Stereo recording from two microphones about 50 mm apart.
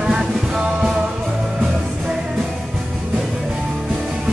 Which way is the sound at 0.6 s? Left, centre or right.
Centre.